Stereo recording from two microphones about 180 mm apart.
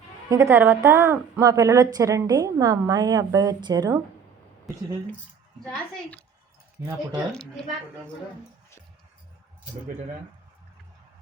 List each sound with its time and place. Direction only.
0.3 s a woman's voice: 15° right (ahead or behind)
5.6 s a woman's voice: 5° left (ahead or behind)